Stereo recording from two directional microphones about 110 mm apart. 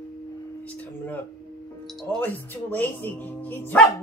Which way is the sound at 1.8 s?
5° left (ahead or behind).